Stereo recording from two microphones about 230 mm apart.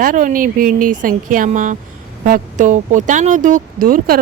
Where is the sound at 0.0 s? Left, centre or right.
Right.